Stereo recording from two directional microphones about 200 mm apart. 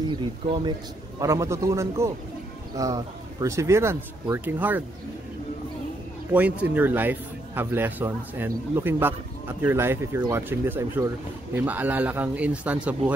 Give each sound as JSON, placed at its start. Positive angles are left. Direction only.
{"t": 0.1, "sound": "a man's voice", "side_deg": -25}
{"t": 6.3, "sound": "a man's voice", "side_deg": -5}